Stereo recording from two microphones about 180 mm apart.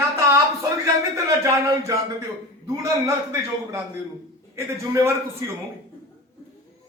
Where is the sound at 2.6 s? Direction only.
15° right (ahead or behind).